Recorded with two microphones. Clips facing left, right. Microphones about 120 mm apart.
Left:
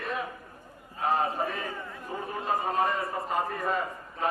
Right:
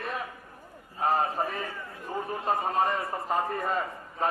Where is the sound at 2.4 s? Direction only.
35° right (ahead or behind).